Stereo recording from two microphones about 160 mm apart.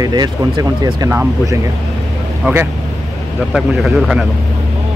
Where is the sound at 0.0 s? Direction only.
25° right (ahead or behind); by 4.3 s 5° right (ahead or behind).